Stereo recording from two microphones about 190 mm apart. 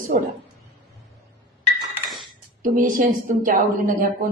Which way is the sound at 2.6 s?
45° right (ahead or behind).